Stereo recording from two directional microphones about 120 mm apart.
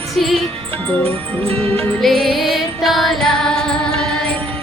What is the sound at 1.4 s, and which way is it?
Music, 55° right (ahead or behind).